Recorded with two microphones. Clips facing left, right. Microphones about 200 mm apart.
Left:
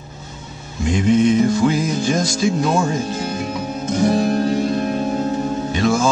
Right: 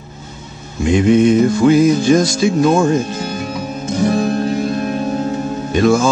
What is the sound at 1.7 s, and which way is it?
Music, 70° right (ahead or behind).